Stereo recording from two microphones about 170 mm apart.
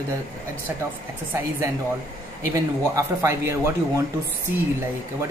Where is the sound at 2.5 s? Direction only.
15° right (ahead or behind).